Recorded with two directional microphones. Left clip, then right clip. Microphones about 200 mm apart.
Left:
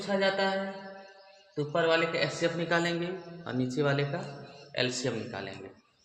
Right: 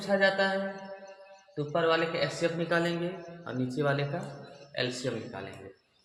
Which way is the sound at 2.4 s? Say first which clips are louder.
Right 1 dB; 30° left (ahead or behind).